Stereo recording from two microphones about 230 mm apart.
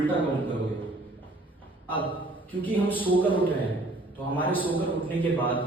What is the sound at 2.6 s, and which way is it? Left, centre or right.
Speech, centre.